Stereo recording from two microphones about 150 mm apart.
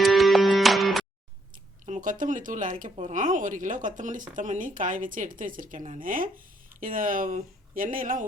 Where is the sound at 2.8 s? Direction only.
55° right (ahead or behind).